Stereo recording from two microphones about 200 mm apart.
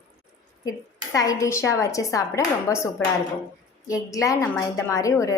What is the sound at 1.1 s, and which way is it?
A woman's voice, 15° left (ahead or behind).